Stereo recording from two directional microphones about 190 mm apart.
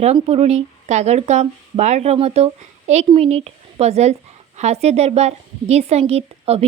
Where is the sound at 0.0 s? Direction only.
35° right (ahead or behind).